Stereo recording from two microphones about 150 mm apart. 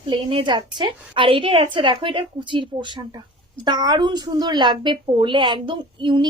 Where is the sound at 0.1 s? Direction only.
35° right (ahead or behind).